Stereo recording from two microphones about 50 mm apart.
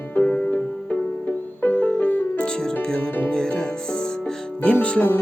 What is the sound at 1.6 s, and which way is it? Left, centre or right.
Music, left.